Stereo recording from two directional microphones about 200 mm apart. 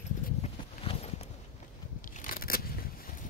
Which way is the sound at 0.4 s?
30° left (ahead or behind).